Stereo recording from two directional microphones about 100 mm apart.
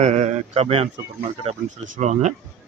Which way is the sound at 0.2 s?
90° right.